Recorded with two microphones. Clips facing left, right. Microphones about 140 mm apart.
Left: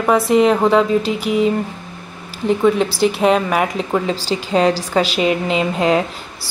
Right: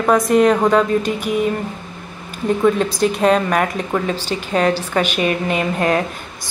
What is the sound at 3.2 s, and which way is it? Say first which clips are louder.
Speech: right 1 dB; 10° left (ahead or behind).